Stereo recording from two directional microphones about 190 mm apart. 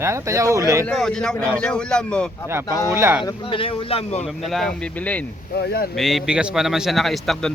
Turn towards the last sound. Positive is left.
turn(degrees=0)  # may be behind; listen again after turning